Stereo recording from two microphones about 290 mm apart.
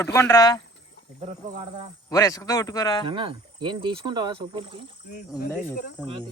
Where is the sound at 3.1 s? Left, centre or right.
Centre.